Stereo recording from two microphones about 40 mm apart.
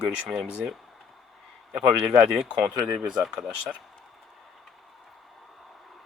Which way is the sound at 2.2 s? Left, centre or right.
Right.